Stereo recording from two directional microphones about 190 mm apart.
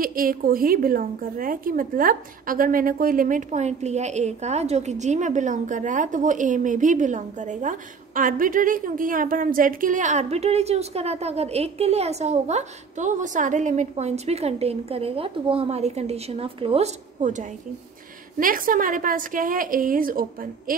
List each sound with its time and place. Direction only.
0.0 s a woman's voice: 50° right (ahead or behind)